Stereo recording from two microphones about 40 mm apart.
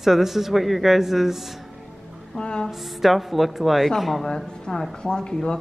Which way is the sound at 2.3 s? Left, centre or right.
Left.